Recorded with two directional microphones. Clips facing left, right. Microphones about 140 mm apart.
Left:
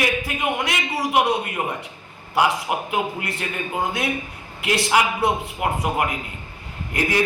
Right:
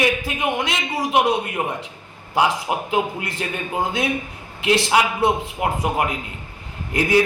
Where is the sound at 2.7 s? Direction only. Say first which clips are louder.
Right 2 dB; 30° right (ahead or behind).